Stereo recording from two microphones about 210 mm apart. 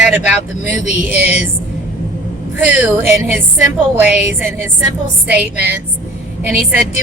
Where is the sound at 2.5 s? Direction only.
10° right (ahead or behind).